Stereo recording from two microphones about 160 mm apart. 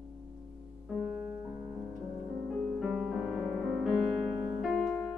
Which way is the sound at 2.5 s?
Centre (ahead or behind).